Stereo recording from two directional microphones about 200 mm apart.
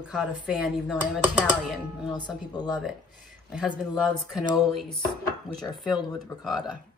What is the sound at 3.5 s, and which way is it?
Speech, centre (ahead or behind).